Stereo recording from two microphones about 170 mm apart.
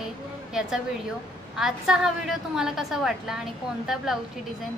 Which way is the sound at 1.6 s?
Centre (ahead or behind).